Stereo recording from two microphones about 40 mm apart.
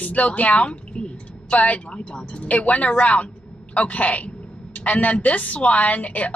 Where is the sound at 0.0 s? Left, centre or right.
Left.